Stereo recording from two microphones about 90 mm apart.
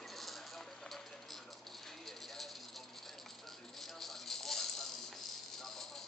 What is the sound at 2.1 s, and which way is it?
Bird, centre (ahead or behind).